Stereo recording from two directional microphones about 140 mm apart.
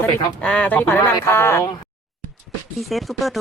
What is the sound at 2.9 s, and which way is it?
Speech, centre (ahead or behind).